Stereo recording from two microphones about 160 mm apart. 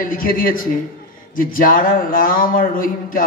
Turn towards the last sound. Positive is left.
turn(degrees=60)  # may be behind; listen again after turning